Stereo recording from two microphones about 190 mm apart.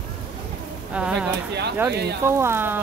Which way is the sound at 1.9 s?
60° right (ahead or behind).